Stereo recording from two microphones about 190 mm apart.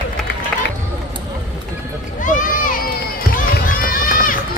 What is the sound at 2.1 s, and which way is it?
Run, 45° left (ahead or behind).